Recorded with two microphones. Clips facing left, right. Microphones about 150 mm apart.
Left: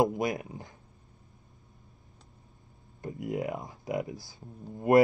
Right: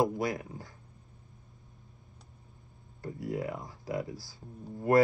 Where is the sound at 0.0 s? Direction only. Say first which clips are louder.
Left 2 dB; 20° left (ahead or behind).